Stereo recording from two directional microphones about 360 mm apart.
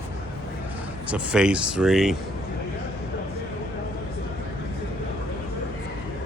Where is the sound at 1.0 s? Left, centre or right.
Centre.